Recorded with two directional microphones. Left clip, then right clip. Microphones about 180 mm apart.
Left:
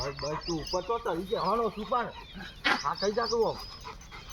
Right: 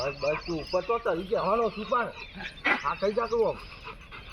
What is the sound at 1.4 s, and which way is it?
Speech, centre (ahead or behind).